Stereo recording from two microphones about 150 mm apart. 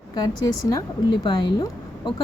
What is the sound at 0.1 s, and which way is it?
Speech, 25° left (ahead or behind).